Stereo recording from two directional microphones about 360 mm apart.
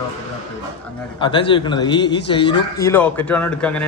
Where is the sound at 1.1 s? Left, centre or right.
Centre.